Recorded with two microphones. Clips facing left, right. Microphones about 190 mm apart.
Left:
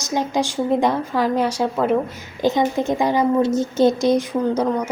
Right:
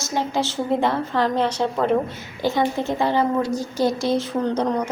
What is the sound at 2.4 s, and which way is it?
A woman's voice, 20° left (ahead or behind).